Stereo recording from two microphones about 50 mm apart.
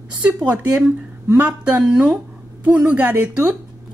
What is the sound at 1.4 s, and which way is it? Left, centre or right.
Speech, right.